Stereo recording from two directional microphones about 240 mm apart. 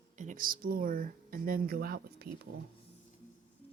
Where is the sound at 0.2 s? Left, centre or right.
Right.